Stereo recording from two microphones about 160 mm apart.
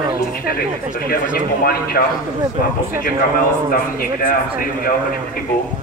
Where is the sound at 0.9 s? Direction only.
65° left (ahead or behind).